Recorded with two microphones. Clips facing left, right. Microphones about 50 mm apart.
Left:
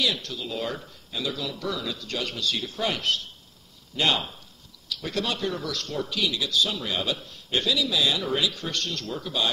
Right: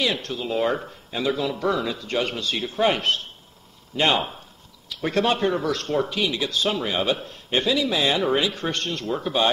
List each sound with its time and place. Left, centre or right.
0.0 s speech: right